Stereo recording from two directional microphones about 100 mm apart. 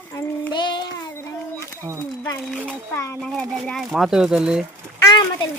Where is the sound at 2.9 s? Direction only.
30° left (ahead or behind).